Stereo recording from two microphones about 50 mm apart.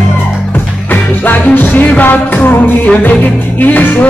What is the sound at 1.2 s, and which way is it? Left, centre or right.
Music, left.